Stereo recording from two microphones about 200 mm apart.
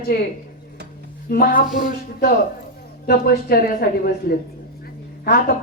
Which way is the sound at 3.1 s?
50° left (ahead or behind).